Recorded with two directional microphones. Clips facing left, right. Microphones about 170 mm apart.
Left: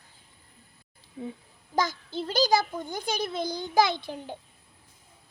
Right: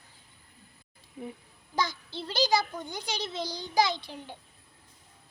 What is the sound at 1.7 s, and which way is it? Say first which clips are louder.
A child's voice: left 4 dB; 45° left (ahead or behind).